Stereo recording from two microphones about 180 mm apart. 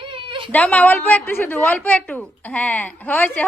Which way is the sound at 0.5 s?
10° left (ahead or behind).